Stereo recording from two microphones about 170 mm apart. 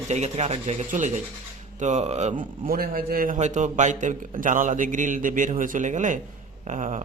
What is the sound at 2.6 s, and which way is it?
A man's voice, 60° right (ahead or behind).